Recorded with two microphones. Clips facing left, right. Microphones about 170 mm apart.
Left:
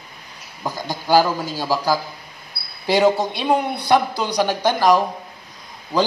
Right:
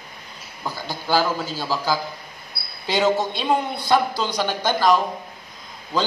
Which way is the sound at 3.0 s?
10° left (ahead or behind).